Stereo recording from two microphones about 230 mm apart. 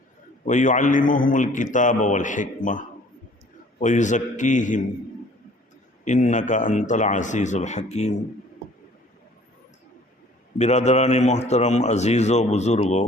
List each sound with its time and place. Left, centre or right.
0.4 s a man's voice: left
6.1 s a man's voice: left
10.6 s a man's voice: left